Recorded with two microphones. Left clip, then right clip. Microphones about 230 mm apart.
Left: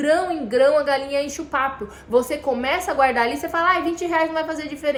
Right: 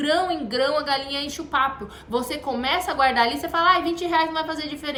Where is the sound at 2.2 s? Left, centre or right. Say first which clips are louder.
Left 5 dB; centre.